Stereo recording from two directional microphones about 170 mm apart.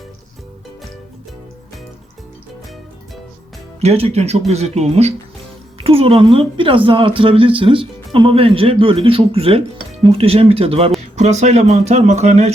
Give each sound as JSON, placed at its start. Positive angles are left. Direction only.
{"t": 3.8, "sound": "speech", "side_deg": -35}